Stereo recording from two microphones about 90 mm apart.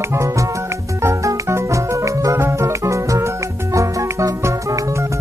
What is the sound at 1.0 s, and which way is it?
Music, 30° right (ahead or behind).